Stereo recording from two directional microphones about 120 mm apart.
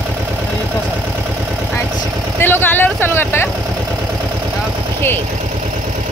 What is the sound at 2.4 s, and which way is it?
Vehicle, 15° left (ahead or behind).